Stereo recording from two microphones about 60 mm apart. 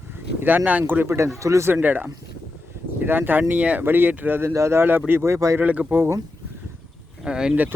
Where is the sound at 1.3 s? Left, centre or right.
Right.